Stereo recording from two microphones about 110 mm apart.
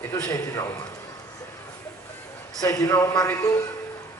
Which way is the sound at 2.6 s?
30° left (ahead or behind).